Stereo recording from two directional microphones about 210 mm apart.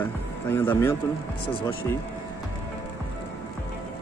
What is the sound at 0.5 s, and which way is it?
Speech, 10° left (ahead or behind).